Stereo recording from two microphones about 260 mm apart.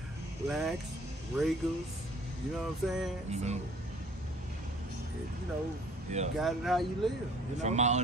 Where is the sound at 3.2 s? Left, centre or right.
Right.